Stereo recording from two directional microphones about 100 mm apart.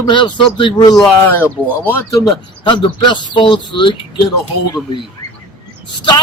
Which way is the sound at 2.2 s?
50° left (ahead or behind).